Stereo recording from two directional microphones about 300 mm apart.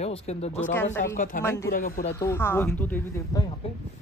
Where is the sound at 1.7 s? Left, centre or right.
Left.